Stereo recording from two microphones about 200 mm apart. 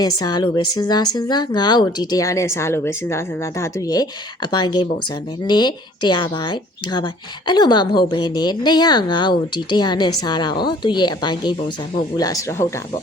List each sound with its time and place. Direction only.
0.2 s speech: 20° left (ahead or behind)